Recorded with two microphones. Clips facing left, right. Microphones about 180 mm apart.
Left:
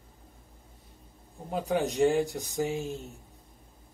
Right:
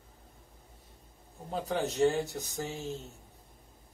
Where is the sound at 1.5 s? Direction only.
10° left (ahead or behind).